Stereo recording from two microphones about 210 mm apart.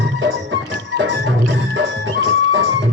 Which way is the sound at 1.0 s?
65° right (ahead or behind).